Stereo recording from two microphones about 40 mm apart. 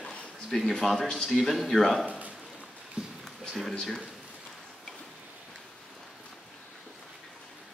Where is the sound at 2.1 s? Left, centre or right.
Right.